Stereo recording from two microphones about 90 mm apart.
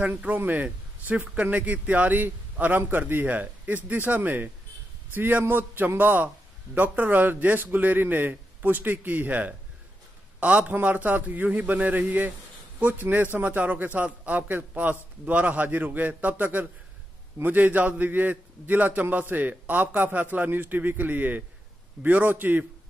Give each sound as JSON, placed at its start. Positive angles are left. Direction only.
{"t": 0.0, "sound": "a man's voice", "side_deg": -15}